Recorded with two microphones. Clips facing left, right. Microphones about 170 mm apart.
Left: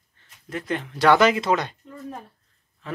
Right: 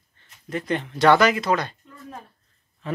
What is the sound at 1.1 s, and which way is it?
Speech, 25° left (ahead or behind).